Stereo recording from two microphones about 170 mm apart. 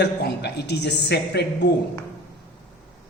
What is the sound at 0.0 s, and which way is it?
A woman's voice, 80° left.